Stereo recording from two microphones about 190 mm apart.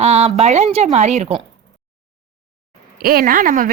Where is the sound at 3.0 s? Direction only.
50° right (ahead or behind).